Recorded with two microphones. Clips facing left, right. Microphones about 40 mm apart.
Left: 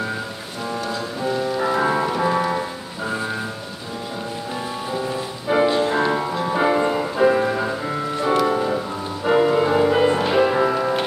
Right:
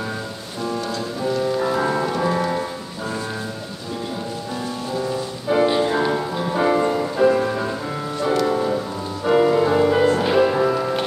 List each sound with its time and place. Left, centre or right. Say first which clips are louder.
1.2 s music: right 1 dB; centre
4.9 s music: right 2 dB; centre